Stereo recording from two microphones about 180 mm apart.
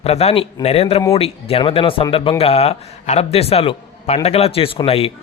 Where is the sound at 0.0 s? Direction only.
35° left (ahead or behind).